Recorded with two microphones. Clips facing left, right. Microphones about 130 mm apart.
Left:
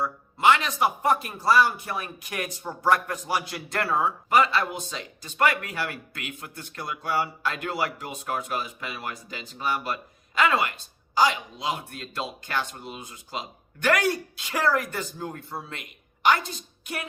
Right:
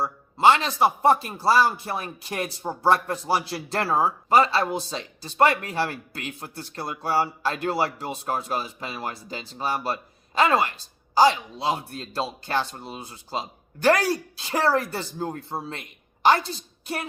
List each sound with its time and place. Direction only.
0.0 s a man's voice: 30° right (ahead or behind)